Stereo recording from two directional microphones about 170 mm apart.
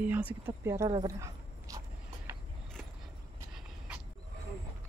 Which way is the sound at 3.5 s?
5° right (ahead or behind).